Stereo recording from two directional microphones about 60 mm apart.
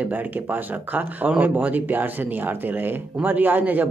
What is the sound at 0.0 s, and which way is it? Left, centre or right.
Speech, right.